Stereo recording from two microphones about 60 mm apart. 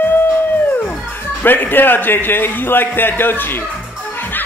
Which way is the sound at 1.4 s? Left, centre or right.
Left.